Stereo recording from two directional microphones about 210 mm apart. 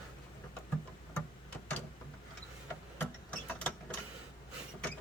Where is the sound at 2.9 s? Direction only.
5° left (ahead or behind).